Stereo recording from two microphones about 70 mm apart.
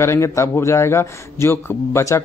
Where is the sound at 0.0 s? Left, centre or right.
Left.